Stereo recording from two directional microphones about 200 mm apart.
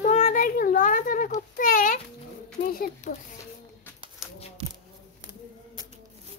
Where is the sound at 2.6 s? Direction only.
45° left (ahead or behind).